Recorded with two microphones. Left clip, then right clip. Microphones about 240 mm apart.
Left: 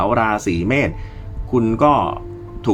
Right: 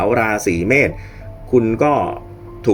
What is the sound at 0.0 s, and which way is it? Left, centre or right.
Speech, centre.